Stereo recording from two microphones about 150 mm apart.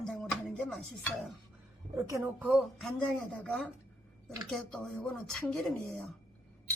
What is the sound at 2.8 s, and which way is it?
A woman's voice, 5° left (ahead or behind).